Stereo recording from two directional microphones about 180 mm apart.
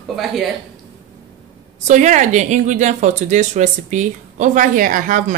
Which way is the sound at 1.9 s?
45° right (ahead or behind).